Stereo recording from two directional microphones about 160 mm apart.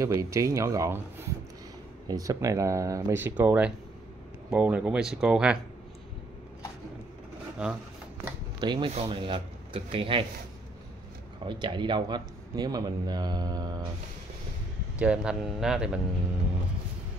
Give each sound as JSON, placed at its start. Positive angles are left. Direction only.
{"t": 0.0, "sound": "speech", "side_deg": -20}
{"t": 2.0, "sound": "speech", "side_deg": -20}
{"t": 7.6, "sound": "speech", "side_deg": -5}
{"t": 8.5, "sound": "speech", "side_deg": -30}
{"t": 11.4, "sound": "speech", "side_deg": -30}
{"t": 15.0, "sound": "speech", "side_deg": -5}